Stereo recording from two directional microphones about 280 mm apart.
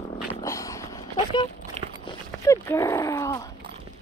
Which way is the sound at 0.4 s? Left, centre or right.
Centre.